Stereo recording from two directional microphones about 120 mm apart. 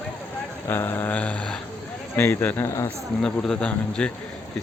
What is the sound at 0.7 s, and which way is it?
Mantra, 20° left (ahead or behind).